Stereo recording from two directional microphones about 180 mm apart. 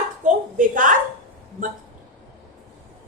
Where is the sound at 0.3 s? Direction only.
45° right (ahead or behind).